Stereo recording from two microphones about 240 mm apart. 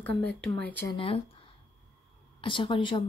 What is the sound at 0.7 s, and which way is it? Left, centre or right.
Speech, centre.